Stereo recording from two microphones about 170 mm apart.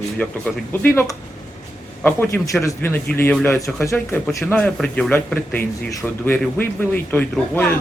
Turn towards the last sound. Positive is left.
turn(degrees=10)  # may be behind; listen again after turning